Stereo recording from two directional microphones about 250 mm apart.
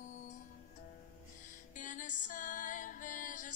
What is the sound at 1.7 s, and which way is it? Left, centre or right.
Music, left.